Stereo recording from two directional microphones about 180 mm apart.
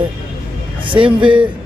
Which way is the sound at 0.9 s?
30° right (ahead or behind).